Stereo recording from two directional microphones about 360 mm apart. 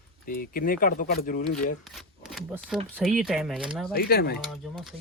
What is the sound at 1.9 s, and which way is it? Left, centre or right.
Speech, centre.